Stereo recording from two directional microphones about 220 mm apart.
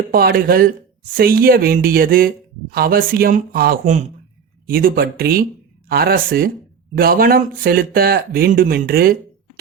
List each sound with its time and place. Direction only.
0.1 s speech: 45° right (ahead or behind)